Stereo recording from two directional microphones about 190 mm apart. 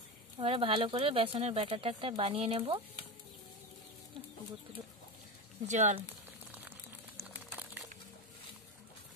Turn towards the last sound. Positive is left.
turn(degrees=-10)  # may be behind; listen again after turning